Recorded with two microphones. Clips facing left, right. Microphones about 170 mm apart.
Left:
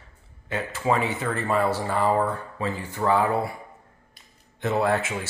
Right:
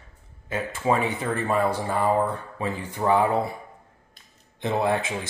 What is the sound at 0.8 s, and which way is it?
Speech, 25° right (ahead or behind).